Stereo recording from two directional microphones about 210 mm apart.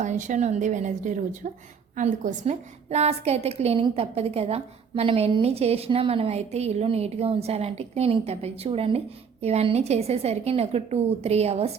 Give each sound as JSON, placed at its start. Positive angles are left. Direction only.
{"t": 0.0, "sound": "a woman's voice", "side_deg": -35}